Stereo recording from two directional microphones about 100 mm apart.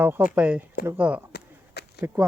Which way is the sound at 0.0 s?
15° right (ahead or behind).